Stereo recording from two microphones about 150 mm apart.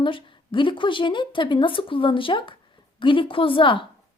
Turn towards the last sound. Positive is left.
turn(degrees=35)  # may be behind; listen again after turning